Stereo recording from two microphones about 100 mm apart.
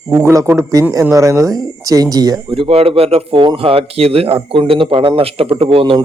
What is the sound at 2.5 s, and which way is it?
Speech, 65° right (ahead or behind).